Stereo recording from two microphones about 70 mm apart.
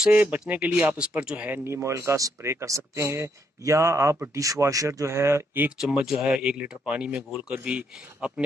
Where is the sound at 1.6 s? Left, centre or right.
Right.